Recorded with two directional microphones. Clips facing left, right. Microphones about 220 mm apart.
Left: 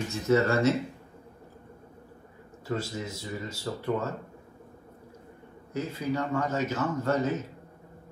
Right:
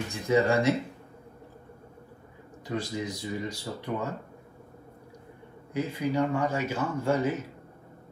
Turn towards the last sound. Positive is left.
turn(degrees=-10)  # may be behind; listen again after turning